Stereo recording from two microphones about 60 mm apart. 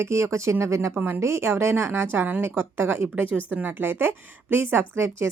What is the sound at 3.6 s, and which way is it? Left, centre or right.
A woman's voice, right.